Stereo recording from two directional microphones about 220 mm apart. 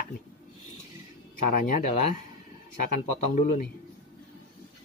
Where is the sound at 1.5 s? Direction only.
40° left (ahead or behind).